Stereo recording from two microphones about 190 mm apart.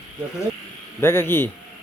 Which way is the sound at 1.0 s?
15° left (ahead or behind).